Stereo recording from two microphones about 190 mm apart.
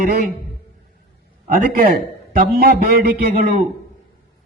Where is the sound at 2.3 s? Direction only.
55° right (ahead or behind).